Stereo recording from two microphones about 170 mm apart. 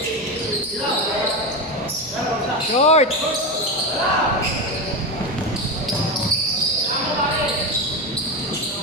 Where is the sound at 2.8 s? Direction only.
40° left (ahead or behind).